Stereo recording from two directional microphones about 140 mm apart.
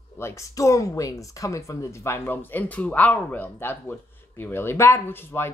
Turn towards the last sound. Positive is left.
turn(degrees=15)  # may be behind; listen again after turning